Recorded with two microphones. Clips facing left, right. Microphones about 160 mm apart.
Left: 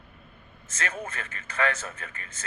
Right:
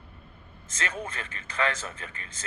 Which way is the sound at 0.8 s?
30° right (ahead or behind).